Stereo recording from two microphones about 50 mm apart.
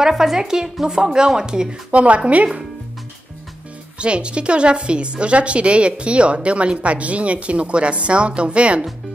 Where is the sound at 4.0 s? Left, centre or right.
Right.